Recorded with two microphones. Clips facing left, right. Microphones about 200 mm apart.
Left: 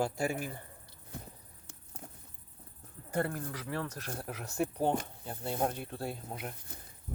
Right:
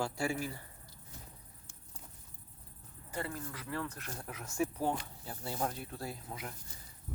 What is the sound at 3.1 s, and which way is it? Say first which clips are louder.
Speech: left 6 dB; 55° left (ahead or behind).